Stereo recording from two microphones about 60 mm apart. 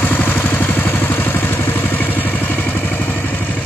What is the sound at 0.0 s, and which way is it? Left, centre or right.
Vehicle, left.